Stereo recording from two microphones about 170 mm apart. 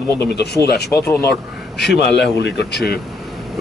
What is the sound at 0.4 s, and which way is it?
Speech, 70° left (ahead or behind).